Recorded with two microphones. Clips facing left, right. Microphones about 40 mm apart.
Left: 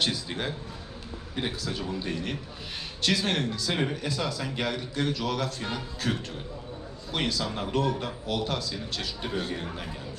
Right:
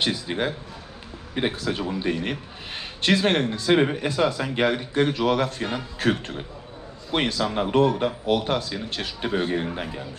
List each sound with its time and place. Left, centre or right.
0.0 s a man's voice: right